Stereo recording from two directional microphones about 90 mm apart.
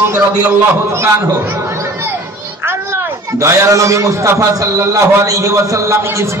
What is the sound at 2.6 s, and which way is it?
A man's voice, 30° right (ahead or behind).